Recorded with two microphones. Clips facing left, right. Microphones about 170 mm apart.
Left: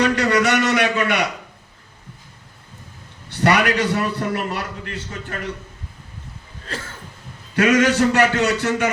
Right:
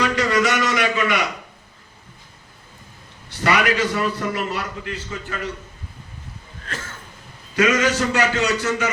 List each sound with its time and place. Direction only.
0.0 s a sound: 65° left (ahead or behind)
3.2 s a man's voice: 60° left (ahead or behind)
7.5 s a man's voice: 60° left (ahead or behind)